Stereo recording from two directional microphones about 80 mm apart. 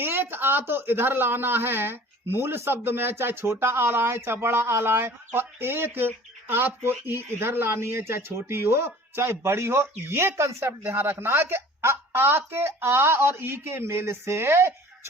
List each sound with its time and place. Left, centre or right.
0.0 s speech: right